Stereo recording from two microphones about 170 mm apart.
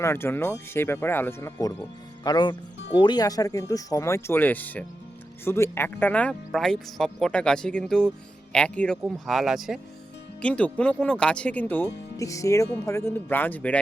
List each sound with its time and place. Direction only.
0.0 s speech: 15° left (ahead or behind)